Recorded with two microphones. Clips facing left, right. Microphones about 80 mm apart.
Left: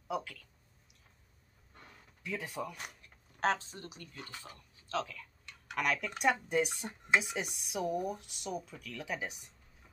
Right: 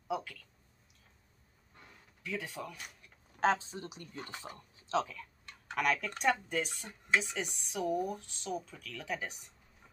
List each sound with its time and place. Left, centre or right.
0.1 s speech: centre
2.2 s speech: centre
3.0 s a sound: centre
3.5 s speech: centre
5.4 s typing: right
5.8 s speech: centre